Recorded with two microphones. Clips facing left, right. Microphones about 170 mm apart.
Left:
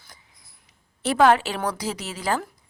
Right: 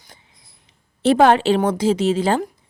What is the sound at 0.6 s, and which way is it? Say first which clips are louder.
A woman's voice: right 10 dB; 25° right (ahead or behind).